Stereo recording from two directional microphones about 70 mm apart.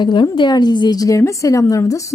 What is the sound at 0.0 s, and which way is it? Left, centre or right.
A woman's voice, left.